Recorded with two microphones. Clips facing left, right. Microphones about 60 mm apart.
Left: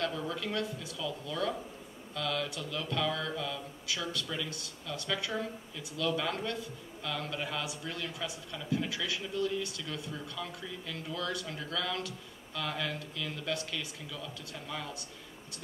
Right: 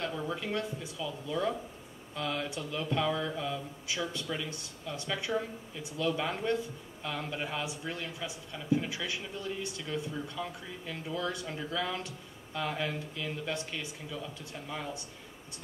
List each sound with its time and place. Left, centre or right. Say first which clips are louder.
0.0 s speech: even; right
2.1 s mantra: even; right